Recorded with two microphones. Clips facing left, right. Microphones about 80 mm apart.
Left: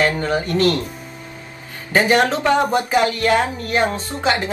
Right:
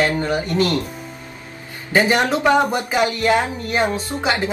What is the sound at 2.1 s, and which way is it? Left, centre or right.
Speech, centre.